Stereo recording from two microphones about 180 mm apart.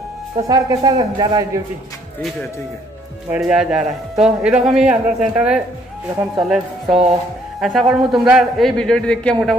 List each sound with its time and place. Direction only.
0.5 s a man's voice: 20° right (ahead or behind)
3.3 s a man's voice: 5° right (ahead or behind)